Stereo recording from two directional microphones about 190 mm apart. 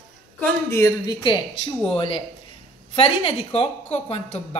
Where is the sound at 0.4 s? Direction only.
15° left (ahead or behind).